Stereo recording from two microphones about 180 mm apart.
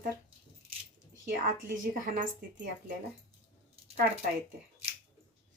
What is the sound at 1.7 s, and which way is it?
Speech, 50° right (ahead or behind).